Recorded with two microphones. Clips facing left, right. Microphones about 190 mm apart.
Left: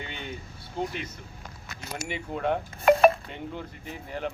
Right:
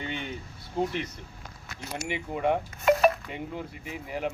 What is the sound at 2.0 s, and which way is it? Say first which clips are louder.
Speech: right 1 dB; 10° right (ahead or behind).